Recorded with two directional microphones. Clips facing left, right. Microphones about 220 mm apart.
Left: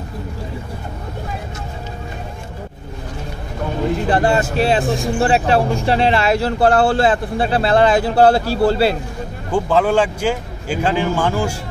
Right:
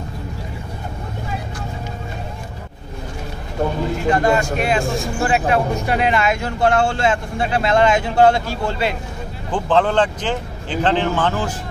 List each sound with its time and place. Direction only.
4.1 s speech: 30° left (ahead or behind)
4.8 s speech: centre (ahead or behind)
5.2 s speech: 30° left (ahead or behind)
9.5 s speech: 10° left (ahead or behind)